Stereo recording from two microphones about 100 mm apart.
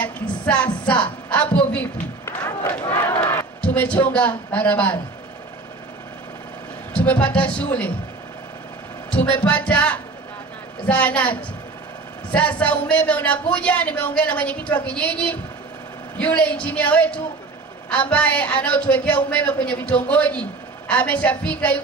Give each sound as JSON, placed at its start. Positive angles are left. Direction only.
{"t": 0.0, "sound": "music", "side_deg": 10}
{"t": 0.8, "sound": "a woman's voice", "side_deg": 10}
{"t": 2.2, "sound": "music", "side_deg": 20}
{"t": 2.9, "sound": "crowd", "side_deg": 20}
{"t": 3.6, "sound": "a man's voice", "side_deg": 15}
{"t": 6.9, "sound": "a man's voice", "side_deg": 10}
{"t": 9.1, "sound": "a man's voice", "side_deg": 15}